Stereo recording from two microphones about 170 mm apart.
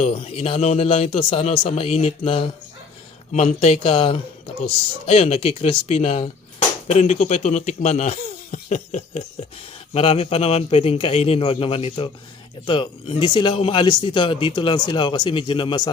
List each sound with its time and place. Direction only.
0.0 s a man's voice: 35° left (ahead or behind)